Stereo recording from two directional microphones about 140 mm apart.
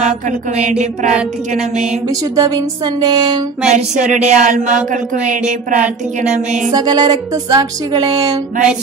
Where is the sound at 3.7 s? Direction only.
60° right (ahead or behind).